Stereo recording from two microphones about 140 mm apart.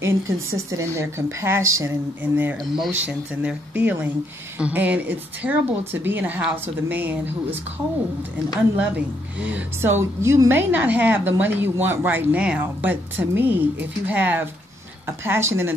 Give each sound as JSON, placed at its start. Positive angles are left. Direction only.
{"t": 0.0, "sound": "speech", "side_deg": -20}
{"t": 2.6, "sound": "speech", "side_deg": 0}
{"t": 3.0, "sound": "a woman's voice", "side_deg": -10}
{"t": 9.5, "sound": "a woman's voice", "side_deg": -15}